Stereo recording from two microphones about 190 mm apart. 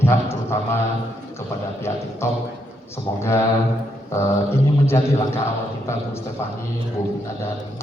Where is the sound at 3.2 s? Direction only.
15° left (ahead or behind).